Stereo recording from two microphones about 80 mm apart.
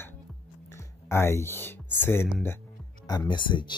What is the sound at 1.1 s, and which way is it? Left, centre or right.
Speech, left.